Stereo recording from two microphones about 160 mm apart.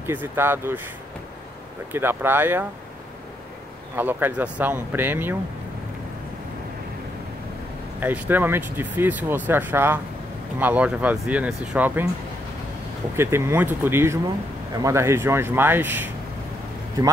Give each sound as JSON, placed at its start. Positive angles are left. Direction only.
{"t": 0.0, "sound": "speech", "side_deg": -15}
{"t": 1.9, "sound": "speech", "side_deg": -15}
{"t": 3.9, "sound": "speech", "side_deg": -10}
{"t": 8.0, "sound": "speech", "side_deg": -10}
{"t": 13.1, "sound": "speech", "side_deg": -15}